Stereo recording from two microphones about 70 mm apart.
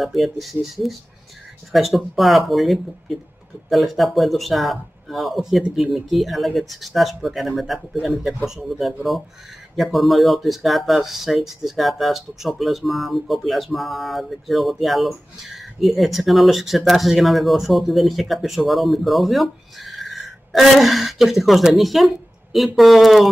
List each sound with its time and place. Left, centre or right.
0.0 s speech: centre